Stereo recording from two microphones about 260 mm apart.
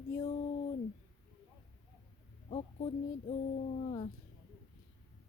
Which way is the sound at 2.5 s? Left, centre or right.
Left.